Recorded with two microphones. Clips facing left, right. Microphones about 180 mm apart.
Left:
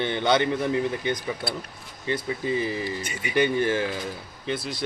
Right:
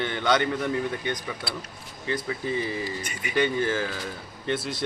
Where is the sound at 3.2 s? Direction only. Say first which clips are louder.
Left 2 dB; 20° left (ahead or behind).